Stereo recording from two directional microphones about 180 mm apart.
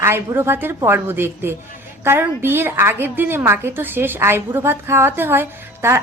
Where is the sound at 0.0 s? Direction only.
15° right (ahead or behind).